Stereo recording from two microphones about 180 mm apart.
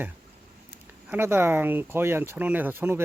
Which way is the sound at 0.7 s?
10° right (ahead or behind).